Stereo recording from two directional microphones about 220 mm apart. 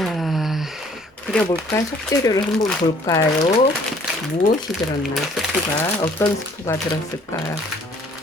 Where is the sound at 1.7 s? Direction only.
15° left (ahead or behind).